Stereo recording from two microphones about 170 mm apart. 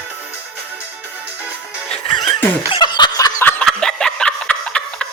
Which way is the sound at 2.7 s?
25° left (ahead or behind).